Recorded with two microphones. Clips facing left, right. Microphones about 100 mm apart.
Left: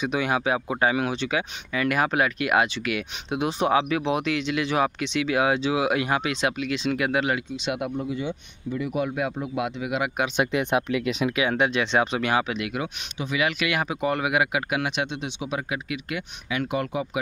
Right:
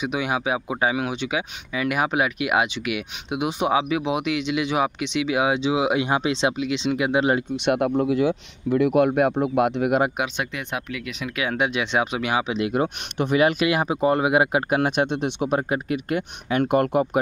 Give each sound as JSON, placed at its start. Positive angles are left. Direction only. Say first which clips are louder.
{"t": 0.0, "sound": "speech", "louder": "even", "side_deg": -10}
{"t": 7.5, "sound": "speech", "louder": "right 7 dB", "side_deg": -55}
{"t": 7.9, "sound": "speech", "louder": "right 8 dB", "side_deg": -90}
{"t": 10.4, "sound": "speech", "louder": "left 6 dB", "side_deg": 20}
{"t": 11.5, "sound": "speech", "louder": "even", "side_deg": -10}
{"t": 12.5, "sound": "speech", "louder": "right 7 dB", "side_deg": -30}
{"t": 12.8, "sound": "speech", "louder": "right 7 dB", "side_deg": -50}
{"t": 15.7, "sound": "speech", "louder": "right 6 dB", "side_deg": -40}